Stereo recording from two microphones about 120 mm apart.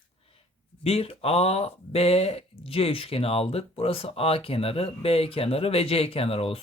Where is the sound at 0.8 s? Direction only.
55° left (ahead or behind).